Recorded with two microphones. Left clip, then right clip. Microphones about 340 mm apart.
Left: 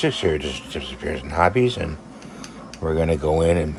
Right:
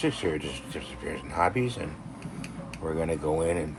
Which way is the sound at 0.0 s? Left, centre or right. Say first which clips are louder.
Left 7 dB; left.